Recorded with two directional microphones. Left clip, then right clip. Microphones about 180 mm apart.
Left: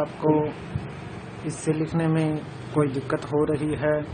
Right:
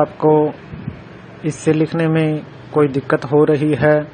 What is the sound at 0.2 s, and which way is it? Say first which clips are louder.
Speech: right 9 dB; 35° right (ahead or behind).